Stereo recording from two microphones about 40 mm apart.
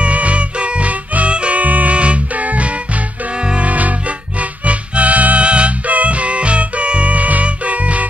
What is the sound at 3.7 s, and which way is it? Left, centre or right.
Music, right.